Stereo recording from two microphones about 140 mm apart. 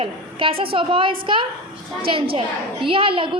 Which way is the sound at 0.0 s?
40° right (ahead or behind).